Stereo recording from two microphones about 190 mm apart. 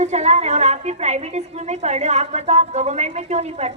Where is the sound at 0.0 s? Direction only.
35° right (ahead or behind).